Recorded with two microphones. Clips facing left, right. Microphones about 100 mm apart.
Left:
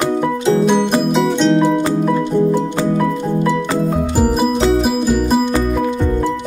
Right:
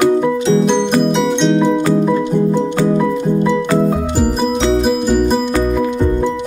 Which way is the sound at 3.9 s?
Centre (ahead or behind).